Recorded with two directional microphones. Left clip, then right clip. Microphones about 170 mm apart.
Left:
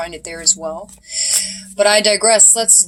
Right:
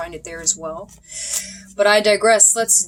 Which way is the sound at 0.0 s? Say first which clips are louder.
Left 5 dB; 20° right (ahead or behind).